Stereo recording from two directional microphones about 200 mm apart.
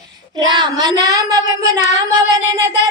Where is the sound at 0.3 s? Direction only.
20° right (ahead or behind).